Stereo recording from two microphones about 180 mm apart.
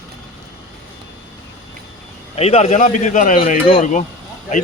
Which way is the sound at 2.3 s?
35° left (ahead or behind).